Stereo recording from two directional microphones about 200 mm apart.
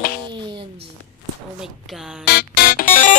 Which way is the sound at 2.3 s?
50° left (ahead or behind).